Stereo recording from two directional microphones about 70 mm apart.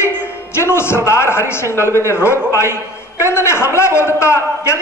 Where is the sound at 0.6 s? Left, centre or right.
Left.